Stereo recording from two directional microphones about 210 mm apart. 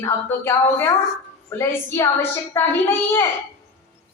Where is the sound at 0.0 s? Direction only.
10° left (ahead or behind).